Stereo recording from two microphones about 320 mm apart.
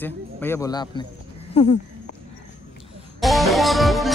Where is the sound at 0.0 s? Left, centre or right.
Centre.